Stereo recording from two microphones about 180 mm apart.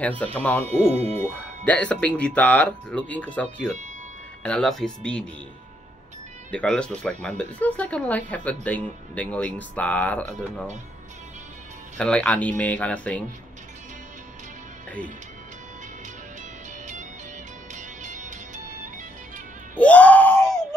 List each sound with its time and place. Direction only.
0.0 s speech: 10° left (ahead or behind)
0.7 s speech: 35° right (ahead or behind)
1.2 s speech: 5° left (ahead or behind)
6.5 s speech: 5° left (ahead or behind)
12.0 s speech: 5° left (ahead or behind)
17.7 s music: 40° right (ahead or behind)
19.7 s screaming: 10° left (ahead or behind)